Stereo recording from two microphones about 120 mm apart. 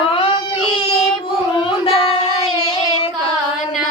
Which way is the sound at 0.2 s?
45° left (ahead or behind).